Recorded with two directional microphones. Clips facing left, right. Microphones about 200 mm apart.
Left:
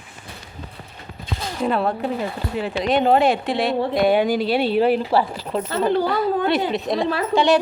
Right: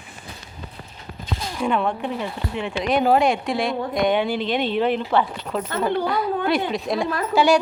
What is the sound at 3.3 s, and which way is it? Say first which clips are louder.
Speech: left 2 dB; centre (ahead or behind).